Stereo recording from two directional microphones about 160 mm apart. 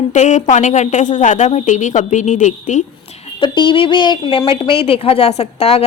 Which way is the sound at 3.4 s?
30° left (ahead or behind).